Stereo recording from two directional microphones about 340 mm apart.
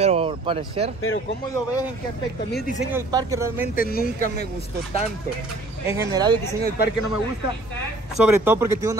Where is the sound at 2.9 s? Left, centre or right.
Centre.